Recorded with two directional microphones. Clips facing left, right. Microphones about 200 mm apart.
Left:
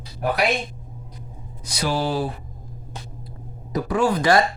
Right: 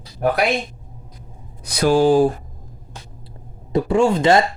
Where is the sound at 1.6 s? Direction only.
55° right (ahead or behind).